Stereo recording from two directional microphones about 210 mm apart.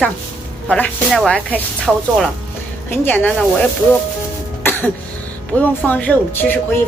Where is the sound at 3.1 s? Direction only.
10° left (ahead or behind).